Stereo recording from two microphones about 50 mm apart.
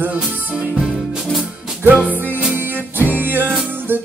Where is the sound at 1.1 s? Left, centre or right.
Centre.